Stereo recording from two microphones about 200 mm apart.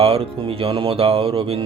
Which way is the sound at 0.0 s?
30° right (ahead or behind).